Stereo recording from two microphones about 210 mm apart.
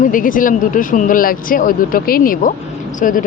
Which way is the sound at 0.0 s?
40° left (ahead or behind).